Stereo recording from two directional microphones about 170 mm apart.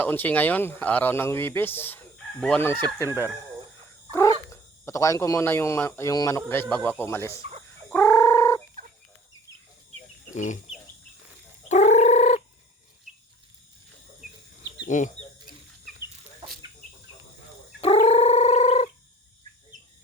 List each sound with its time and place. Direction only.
0.0 s speech: 10° left (ahead or behind)
4.4 s speech: 20° left (ahead or behind)
6.5 s speech: 10° left (ahead or behind)
7.9 s a sound: 10° left (ahead or behind)
10.3 s chicken: 45° left (ahead or behind)
11.7 s fowl: 45° left (ahead or behind)
14.8 s speech: 50° left (ahead or behind)
17.7 s a sound: 35° left (ahead or behind)